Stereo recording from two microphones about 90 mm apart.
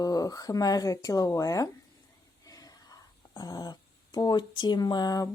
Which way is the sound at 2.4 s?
40° left (ahead or behind).